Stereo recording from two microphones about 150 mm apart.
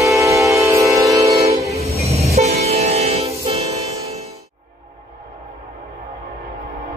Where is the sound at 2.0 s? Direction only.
45° right (ahead or behind).